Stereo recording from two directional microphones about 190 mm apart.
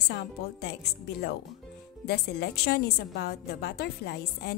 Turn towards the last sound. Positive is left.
turn(degrees=60)  # may be behind; listen again after turning